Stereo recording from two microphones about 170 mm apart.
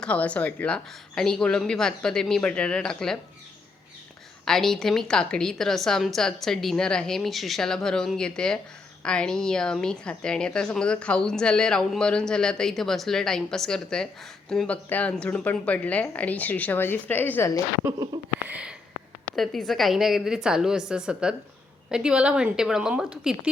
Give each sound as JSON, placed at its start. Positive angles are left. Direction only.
{"t": 0.0, "sound": "a woman's voice", "side_deg": 5}
{"t": 4.4, "sound": "a woman's voice", "side_deg": 0}
{"t": 17.8, "sound": "speech", "side_deg": -20}
{"t": 18.4, "sound": "a sound", "side_deg": -10}
{"t": 19.4, "sound": "a woman's voice", "side_deg": 0}